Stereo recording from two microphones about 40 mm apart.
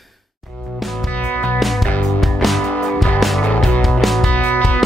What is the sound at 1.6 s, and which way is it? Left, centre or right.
Music, centre.